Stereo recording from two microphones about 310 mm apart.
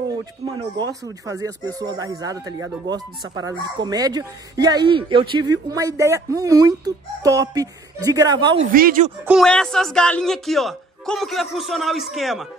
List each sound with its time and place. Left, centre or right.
1.2 s speech: centre
8.7 s speech: right
9.2 s speech: centre